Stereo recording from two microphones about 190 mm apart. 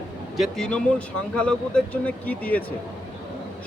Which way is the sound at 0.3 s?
Centre (ahead or behind).